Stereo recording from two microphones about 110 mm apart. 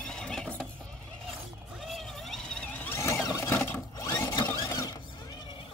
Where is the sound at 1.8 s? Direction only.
Centre (ahead or behind); by 4.1 s 20° left (ahead or behind).